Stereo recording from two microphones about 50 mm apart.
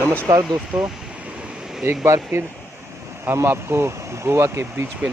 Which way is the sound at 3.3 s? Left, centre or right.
Right.